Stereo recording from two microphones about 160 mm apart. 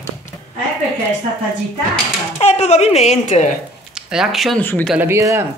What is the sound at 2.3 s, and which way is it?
A woman's voice, 40° left (ahead or behind).